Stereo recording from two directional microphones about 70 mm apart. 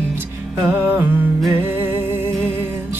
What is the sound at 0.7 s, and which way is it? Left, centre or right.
Music, right.